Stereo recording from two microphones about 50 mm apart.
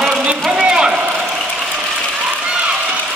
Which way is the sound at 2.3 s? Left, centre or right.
Right.